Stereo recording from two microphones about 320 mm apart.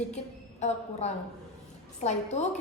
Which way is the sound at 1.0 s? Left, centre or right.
Left.